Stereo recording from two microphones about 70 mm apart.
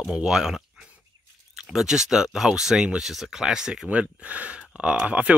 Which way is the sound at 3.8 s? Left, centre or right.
Centre.